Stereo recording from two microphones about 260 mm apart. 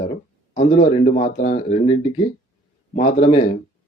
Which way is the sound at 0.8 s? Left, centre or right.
Left.